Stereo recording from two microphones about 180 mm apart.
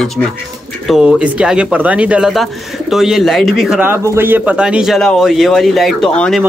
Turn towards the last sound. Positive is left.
turn(degrees=5)  # may be behind; listen again after turning